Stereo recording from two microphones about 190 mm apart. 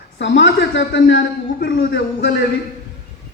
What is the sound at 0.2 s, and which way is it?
A man's voice, 70° left (ahead or behind).